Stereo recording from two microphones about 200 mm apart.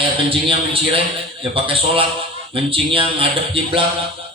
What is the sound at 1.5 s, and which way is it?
Speech, 25° right (ahead or behind).